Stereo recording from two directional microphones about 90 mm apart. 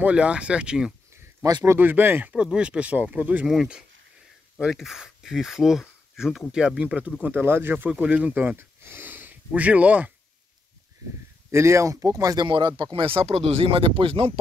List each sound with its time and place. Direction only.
0.0 s speech: 15° right (ahead or behind)
1.6 s speech: 25° right (ahead or behind)
11.5 s speech: 35° right (ahead or behind)
12.4 s speech: 60° right (ahead or behind); by 14.4 s 90° right